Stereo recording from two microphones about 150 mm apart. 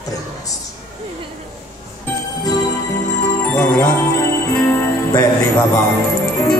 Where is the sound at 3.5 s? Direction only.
15° left (ahead or behind).